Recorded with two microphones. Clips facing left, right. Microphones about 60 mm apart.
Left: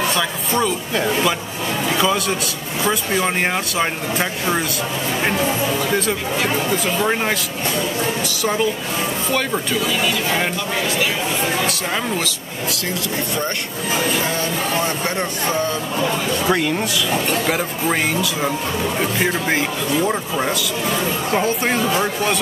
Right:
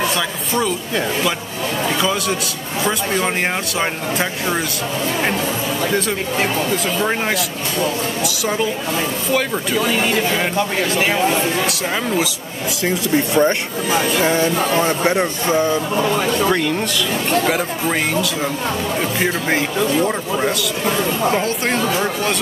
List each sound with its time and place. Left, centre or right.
0.1 s a man's voice: centre
5.9 s speech: centre
9.8 s speech: right
12.8 s speech: right
16.4 s speech: centre
18.9 s speech: centre